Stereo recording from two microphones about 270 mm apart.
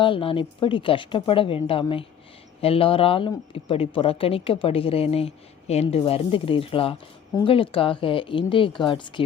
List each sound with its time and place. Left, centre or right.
0.0 s speech: centre